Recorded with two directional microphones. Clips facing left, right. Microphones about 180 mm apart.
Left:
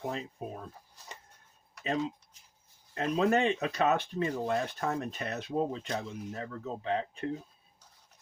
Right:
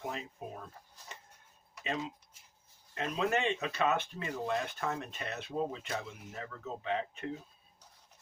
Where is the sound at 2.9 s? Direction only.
35° left (ahead or behind).